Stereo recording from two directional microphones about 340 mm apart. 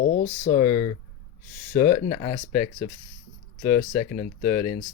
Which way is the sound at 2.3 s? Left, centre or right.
Centre.